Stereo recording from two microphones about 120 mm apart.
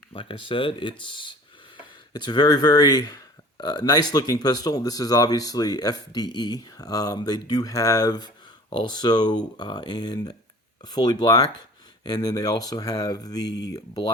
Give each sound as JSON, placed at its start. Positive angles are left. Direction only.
{"t": 0.1, "sound": "speech", "side_deg": 45}